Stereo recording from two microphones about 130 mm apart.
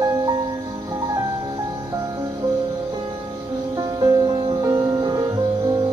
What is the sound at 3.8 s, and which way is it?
Music, 30° right (ahead or behind).